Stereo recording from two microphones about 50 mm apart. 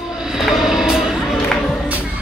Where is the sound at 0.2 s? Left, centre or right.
Centre.